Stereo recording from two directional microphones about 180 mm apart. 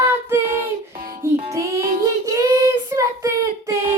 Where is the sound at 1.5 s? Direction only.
15° right (ahead or behind).